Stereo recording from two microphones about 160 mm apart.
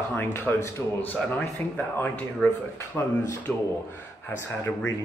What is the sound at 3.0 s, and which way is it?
Speech, 15° left (ahead or behind).